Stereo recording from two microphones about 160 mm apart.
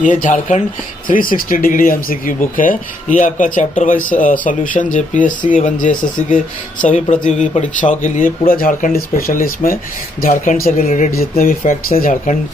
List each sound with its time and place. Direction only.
0.0 s speech: 55° left (ahead or behind)